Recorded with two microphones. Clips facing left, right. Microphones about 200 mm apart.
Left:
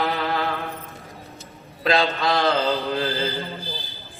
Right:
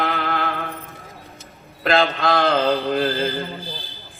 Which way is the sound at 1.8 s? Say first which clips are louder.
Right 2 dB; 55° right (ahead or behind).